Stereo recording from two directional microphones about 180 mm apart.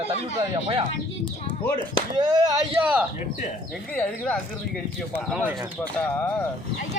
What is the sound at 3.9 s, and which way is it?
Speech, 5° left (ahead or behind).